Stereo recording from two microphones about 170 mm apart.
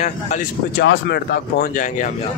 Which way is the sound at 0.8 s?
75° left (ahead or behind).